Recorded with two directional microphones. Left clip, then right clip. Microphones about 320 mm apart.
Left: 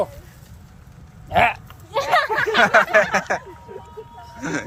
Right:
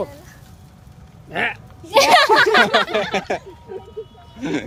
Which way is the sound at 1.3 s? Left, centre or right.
Centre.